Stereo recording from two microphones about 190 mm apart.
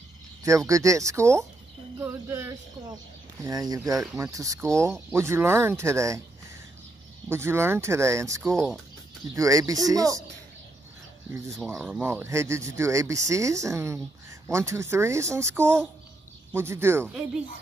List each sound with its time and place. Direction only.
0.4 s speech: 15° right (ahead or behind)
7.2 s speech: 15° right (ahead or behind)
8.5 s speech: centre (ahead or behind)
9.3 s speech: 15° right (ahead or behind)
11.7 s speech: 10° right (ahead or behind)